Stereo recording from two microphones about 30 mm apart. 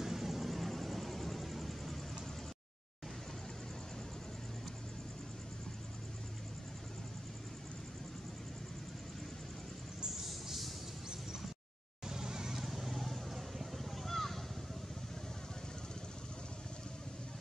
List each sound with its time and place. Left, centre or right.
0.0 s vehicle: centre
10.2 s a sound: centre
12.1 s vehicle: centre
12.5 s vehicle: centre